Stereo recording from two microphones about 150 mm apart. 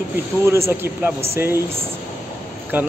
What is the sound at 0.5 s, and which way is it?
Speech, 15° right (ahead or behind).